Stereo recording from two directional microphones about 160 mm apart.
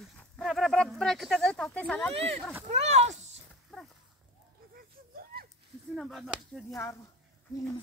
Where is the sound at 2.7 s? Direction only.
45° right (ahead or behind).